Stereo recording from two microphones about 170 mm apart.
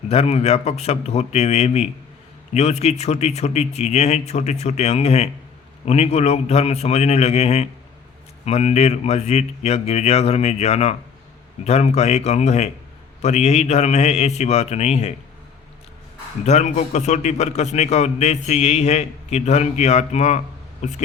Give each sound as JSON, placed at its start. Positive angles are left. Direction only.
{"t": 0.1, "sound": "a man's voice", "side_deg": 40}
{"t": 16.4, "sound": "a man's voice", "side_deg": 40}